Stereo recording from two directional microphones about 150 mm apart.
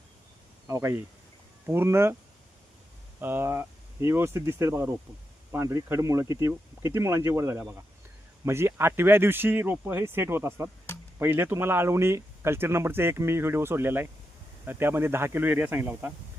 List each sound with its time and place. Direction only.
0.7 s speech: 15° right (ahead or behind)
3.2 s speech: 15° right (ahead or behind)